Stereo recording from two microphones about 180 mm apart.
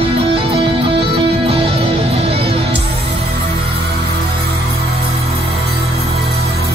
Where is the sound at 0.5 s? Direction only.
30° right (ahead or behind).